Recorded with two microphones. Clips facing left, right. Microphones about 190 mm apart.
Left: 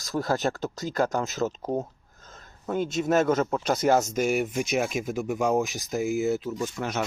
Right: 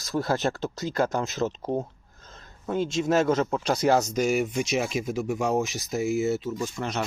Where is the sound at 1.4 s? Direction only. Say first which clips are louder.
Right 1 dB; centre (ahead or behind).